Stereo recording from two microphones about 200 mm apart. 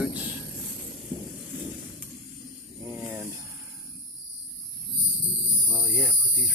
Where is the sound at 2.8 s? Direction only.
5° right (ahead or behind).